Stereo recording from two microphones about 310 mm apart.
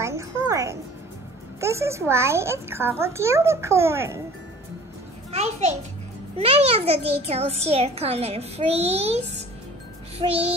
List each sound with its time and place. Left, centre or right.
0.0 s music: centre
1.6 s a child's voice: centre
5.3 s a child's voice: right